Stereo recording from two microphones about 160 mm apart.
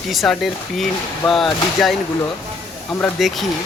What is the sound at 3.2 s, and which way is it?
Speech, centre (ahead or behind).